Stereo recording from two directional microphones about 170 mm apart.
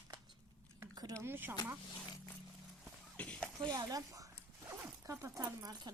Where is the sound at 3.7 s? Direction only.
20° right (ahead or behind).